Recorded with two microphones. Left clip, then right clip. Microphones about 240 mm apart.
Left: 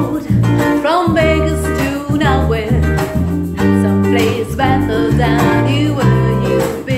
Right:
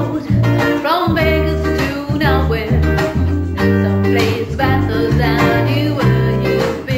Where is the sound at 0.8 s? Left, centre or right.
Left.